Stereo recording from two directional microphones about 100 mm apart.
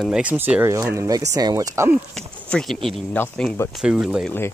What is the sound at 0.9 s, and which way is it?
Speech, 30° right (ahead or behind).